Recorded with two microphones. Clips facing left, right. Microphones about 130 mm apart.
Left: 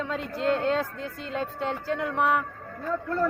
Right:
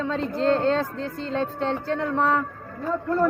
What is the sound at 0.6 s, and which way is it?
Speech, 10° left (ahead or behind).